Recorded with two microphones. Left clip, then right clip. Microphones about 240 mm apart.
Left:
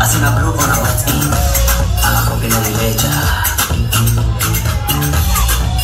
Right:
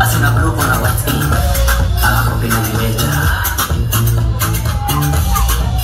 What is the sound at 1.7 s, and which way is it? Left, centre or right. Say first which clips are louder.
Music: right 3 dB; left.